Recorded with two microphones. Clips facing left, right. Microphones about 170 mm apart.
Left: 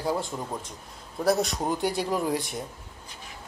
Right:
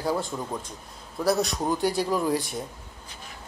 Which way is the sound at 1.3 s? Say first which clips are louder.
Even; 20° left (ahead or behind).